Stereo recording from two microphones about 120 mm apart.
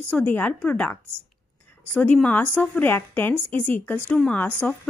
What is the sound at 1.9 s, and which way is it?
A woman's voice, 10° left (ahead or behind).